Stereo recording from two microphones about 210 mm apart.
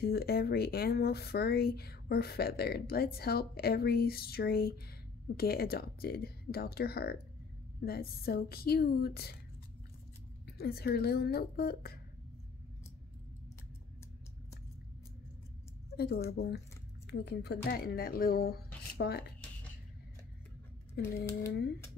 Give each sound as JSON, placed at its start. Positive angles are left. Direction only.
{"t": 0.0, "sound": "speech", "side_deg": 50}
{"t": 10.4, "sound": "speech", "side_deg": 50}
{"t": 16.3, "sound": "speech", "side_deg": 50}
{"t": 21.0, "sound": "speech", "side_deg": 50}